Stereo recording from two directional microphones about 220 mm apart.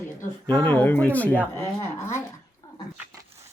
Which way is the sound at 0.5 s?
10° left (ahead or behind).